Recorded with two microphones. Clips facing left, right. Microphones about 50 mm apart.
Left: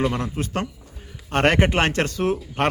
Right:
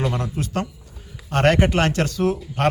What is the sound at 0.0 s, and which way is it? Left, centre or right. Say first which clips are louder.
A man's voice: left 1 dB; left.